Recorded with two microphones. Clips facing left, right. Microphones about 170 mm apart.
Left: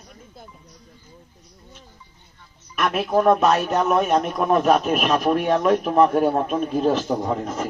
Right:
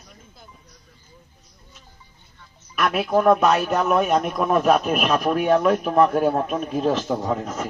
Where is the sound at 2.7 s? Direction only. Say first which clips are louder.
Even; centre (ahead or behind).